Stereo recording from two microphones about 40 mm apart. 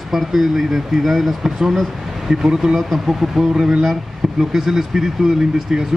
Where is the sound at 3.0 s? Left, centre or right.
Centre.